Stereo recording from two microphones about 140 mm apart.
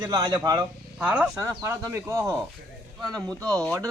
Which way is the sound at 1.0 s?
10° right (ahead or behind).